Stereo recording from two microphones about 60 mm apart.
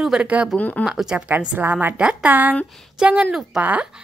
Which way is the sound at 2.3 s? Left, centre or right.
Right.